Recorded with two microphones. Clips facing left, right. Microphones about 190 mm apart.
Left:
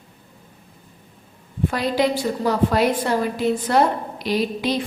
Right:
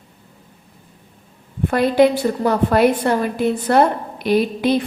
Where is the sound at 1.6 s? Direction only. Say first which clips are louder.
Right 6 dB; 55° right (ahead or behind).